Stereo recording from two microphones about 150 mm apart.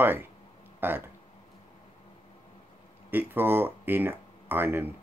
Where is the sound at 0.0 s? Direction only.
15° right (ahead or behind).